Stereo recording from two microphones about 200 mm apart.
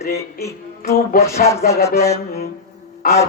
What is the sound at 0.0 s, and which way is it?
Speech, 50° left (ahead or behind).